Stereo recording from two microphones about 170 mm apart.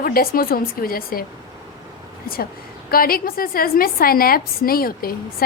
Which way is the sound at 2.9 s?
60° left (ahead or behind).